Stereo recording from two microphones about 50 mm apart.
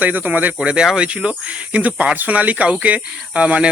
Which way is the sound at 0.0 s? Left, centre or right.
Right.